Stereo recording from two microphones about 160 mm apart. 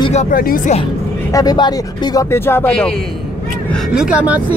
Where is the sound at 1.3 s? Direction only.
25° left (ahead or behind).